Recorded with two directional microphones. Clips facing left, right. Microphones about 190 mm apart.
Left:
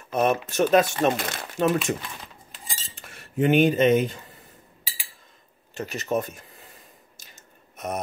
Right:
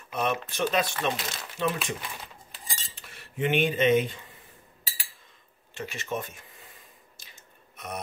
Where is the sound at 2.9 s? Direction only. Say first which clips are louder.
Left 9 dB; 45° left (ahead or behind).